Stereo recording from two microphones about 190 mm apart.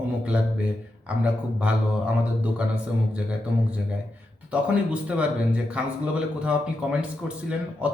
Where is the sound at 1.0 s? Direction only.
5° right (ahead or behind).